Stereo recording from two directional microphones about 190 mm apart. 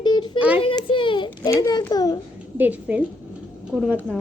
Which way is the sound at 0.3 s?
5° right (ahead or behind).